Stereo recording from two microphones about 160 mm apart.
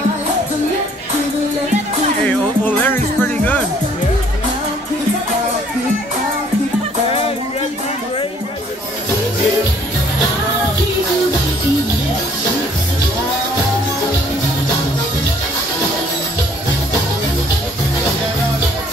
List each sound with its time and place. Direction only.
2.2 s music: 10° left (ahead or behind)
7.1 s music: 35° left (ahead or behind)